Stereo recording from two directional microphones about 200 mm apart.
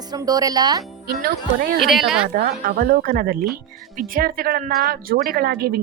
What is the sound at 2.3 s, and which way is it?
A woman's voice, 45° right (ahead or behind).